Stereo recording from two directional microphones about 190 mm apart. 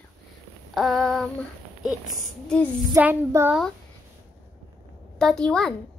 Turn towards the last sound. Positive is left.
turn(degrees=5)  # may be behind; listen again after turning